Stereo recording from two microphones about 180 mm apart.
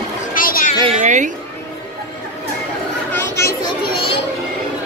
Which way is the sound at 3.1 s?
15° left (ahead or behind).